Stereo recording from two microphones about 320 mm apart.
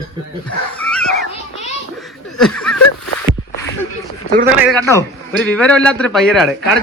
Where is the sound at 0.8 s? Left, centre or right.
Centre.